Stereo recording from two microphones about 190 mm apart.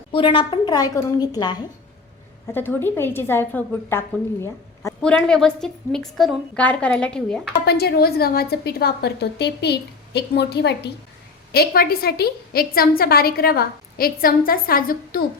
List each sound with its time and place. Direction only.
0.1 s a woman's voice: 25° left (ahead or behind)
2.5 s a woman's voice: 10° left (ahead or behind)
7.6 s a woman's voice: 55° left (ahead or behind)